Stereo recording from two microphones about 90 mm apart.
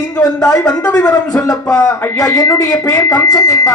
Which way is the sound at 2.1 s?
40° left (ahead or behind).